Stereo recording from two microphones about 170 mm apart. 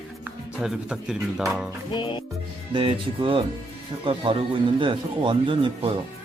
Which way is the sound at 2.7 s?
30° right (ahead or behind).